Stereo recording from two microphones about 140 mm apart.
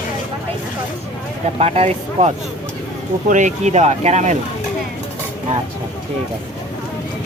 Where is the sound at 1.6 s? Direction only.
50° right (ahead or behind).